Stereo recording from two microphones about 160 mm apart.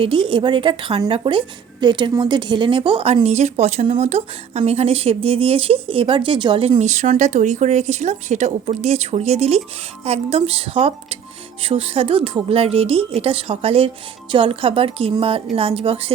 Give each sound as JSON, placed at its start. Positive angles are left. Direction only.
{"t": 0.0, "sound": "a woman's voice", "side_deg": -30}
{"t": 6.7, "sound": "a woman's voice", "side_deg": -45}